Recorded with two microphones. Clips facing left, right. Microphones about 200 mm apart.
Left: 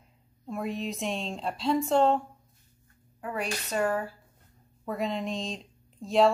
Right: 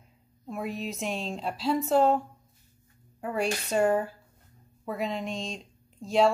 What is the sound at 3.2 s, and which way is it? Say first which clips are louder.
Speech: right 4 dB; 25° right (ahead or behind).